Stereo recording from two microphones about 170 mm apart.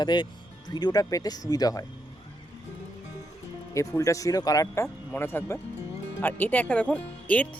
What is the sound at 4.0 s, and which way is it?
Speech, 20° left (ahead or behind).